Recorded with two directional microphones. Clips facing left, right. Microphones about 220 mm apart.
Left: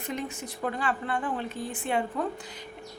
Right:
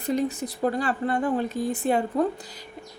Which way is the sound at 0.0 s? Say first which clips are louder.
Right 9 dB; 35° right (ahead or behind).